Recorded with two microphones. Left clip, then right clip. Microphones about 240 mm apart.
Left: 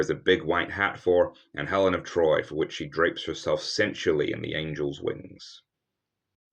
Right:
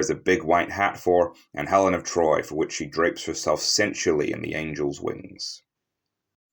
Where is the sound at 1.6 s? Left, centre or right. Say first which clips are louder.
Right 4 dB; centre.